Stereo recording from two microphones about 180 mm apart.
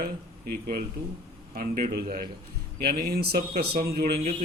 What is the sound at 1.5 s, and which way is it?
Speech, 50° right (ahead or behind).